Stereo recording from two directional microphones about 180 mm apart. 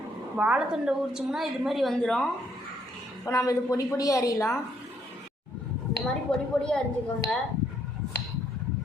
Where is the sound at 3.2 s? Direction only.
15° left (ahead or behind).